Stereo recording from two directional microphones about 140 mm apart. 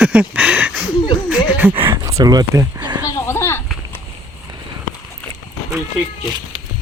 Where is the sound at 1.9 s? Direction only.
25° right (ahead or behind).